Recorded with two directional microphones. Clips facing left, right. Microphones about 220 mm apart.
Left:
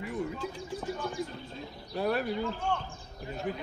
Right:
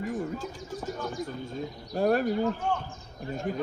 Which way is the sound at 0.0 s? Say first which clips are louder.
Right 2 dB; 45° right (ahead or behind).